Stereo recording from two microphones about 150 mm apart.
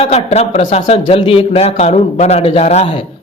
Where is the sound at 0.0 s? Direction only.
45° left (ahead or behind).